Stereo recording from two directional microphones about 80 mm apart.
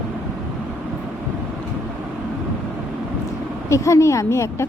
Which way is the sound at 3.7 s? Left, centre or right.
Left.